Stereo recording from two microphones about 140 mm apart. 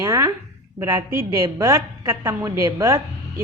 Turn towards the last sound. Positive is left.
turn(degrees=-25)  # may be behind; listen again after turning